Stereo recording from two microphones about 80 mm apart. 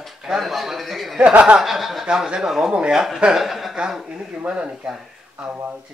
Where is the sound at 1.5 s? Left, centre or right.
Centre.